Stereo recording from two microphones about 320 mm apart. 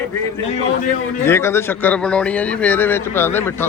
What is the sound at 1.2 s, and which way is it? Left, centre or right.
Speech, centre.